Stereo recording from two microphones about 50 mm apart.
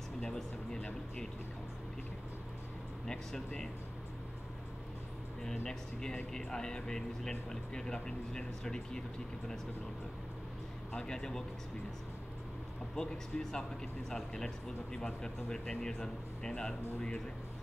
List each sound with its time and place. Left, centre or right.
0.4 s speech: centre
3.1 s speech: centre
5.4 s speech: centre
11.0 s speech: centre
12.9 s speech: centre